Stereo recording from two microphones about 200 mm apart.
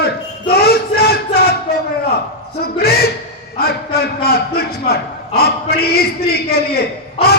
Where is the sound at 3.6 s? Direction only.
50° left (ahead or behind).